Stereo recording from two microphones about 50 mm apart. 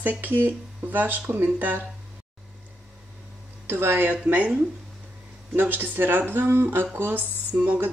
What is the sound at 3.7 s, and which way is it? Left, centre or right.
Speech, right.